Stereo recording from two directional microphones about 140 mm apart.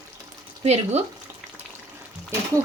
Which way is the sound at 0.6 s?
50° right (ahead or behind).